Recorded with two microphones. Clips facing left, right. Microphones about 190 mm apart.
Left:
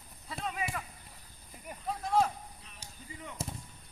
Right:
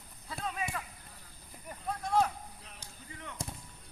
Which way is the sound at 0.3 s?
Centre (ahead or behind).